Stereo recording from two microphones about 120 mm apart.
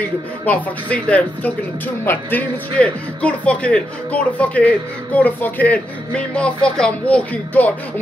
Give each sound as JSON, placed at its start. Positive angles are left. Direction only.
{"t": 0.5, "sound": "speech", "side_deg": 10}